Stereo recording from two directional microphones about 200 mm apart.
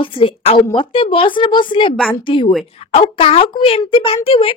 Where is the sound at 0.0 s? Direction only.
25° left (ahead or behind).